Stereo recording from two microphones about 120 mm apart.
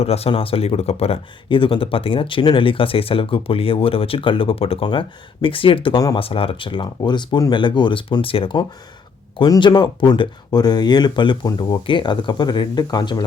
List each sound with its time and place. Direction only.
0.0 s speech: 60° left (ahead or behind); by 13.2 s 35° left (ahead or behind)